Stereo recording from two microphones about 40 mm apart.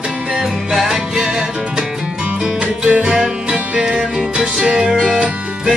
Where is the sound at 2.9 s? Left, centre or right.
Right.